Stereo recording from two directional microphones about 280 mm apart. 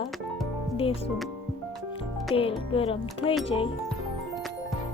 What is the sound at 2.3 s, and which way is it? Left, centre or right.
A child's voice, centre.